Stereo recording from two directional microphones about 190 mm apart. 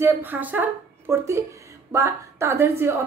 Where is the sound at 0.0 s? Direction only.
10° right (ahead or behind).